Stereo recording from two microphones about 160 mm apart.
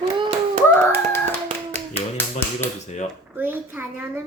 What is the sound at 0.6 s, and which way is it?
Hands, 15° left (ahead or behind).